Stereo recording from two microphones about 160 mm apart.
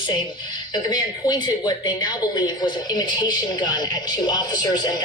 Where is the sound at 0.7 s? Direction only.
25° left (ahead or behind).